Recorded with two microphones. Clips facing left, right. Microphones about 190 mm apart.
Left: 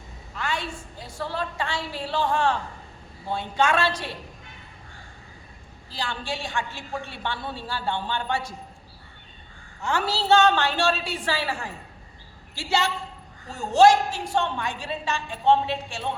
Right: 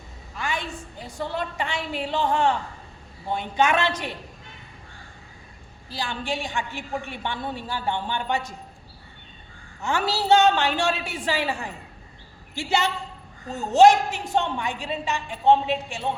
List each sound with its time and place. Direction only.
0.3 s a sound: 15° right (ahead or behind)
1.2 s a woman's voice: 20° right (ahead or behind)
5.9 s a woman's voice: 15° right (ahead or behind)
9.8 s a woman's voice: 15° right (ahead or behind)